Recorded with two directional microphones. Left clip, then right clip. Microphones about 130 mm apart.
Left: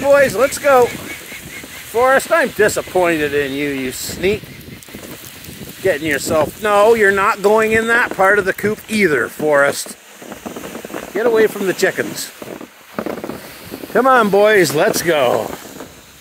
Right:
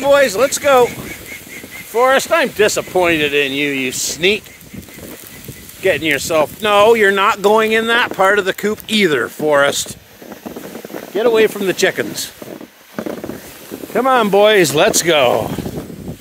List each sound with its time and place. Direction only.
0.0 s speech: 20° right (ahead or behind)
2.0 s speech: 25° right (ahead or behind)
3.9 s speech: 15° right (ahead or behind)
5.9 s speech: 25° right (ahead or behind)
10.4 s a sound: 20° right (ahead or behind)
11.1 s speech: 35° right (ahead or behind)
12.9 s a sound: 25° right (ahead or behind)
13.9 s speech: centre (ahead or behind)
14.3 s speech: 15° right (ahead or behind)